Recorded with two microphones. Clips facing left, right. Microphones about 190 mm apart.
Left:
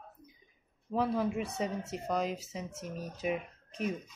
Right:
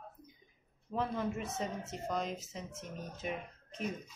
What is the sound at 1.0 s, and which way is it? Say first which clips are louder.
Speech: left 5 dB; 10° left (ahead or behind).